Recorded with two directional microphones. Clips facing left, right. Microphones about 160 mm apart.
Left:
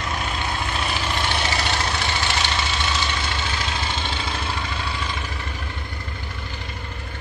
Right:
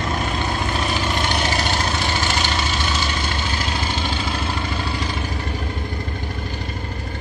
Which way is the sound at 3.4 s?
40° right (ahead or behind).